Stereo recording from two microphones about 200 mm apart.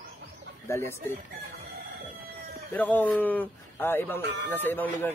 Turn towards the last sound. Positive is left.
turn(degrees=10)  # may be behind; listen again after turning